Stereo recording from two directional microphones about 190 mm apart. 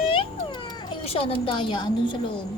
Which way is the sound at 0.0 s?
30° left (ahead or behind).